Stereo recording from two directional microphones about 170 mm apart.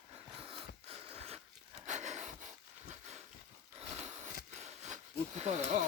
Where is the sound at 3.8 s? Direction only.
40° right (ahead or behind).